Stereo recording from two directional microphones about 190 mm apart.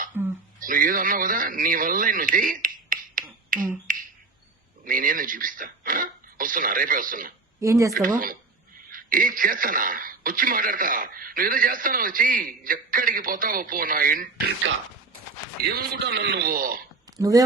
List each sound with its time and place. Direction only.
0.1 s a sound: 15° right (ahead or behind)
0.6 s a man's voice: 45° right (ahead or behind)
7.6 s speech: 15° right (ahead or behind)
8.9 s a man's voice: 45° right (ahead or behind)
15.6 s a man's voice: 55° right (ahead or behind)
17.2 s speech: 20° right (ahead or behind)